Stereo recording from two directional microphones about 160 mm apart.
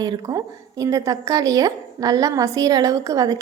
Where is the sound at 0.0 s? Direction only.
25° right (ahead or behind).